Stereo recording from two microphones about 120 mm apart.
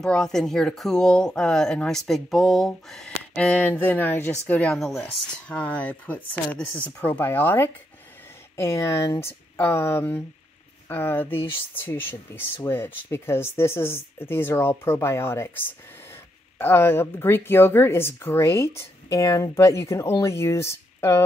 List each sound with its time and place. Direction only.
0.0 s speech: 5° left (ahead or behind); by 21.2 s 20° left (ahead or behind)